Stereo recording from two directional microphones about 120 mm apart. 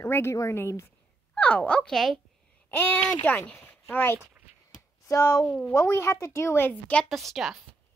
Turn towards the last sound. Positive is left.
turn(degrees=0)  # may be behind; listen again after turning